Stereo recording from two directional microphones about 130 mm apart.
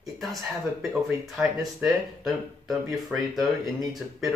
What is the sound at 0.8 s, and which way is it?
Speech, 5° right (ahead or behind).